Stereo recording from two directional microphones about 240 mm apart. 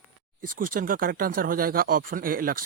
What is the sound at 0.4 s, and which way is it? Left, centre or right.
Speech, right.